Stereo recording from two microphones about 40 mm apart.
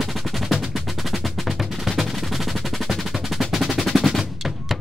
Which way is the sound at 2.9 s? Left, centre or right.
Centre.